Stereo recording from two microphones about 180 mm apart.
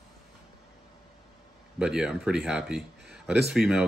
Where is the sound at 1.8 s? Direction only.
5° right (ahead or behind).